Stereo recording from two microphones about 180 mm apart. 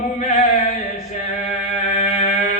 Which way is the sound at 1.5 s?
40° left (ahead or behind).